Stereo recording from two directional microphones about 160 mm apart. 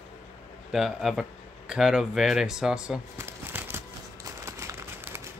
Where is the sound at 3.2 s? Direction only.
15° right (ahead or behind).